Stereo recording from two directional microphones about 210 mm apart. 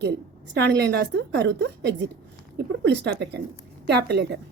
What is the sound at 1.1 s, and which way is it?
A woman's voice, 55° right (ahead or behind).